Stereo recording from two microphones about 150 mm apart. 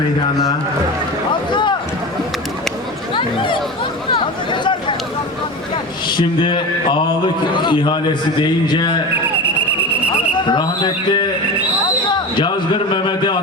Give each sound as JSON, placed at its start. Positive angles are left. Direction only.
{"t": 1.3, "sound": "a sound", "side_deg": 30}
{"t": 3.2, "sound": "speech", "side_deg": 35}
{"t": 10.3, "sound": "speech", "side_deg": 30}
{"t": 12.1, "sound": "basketball bounce", "side_deg": 30}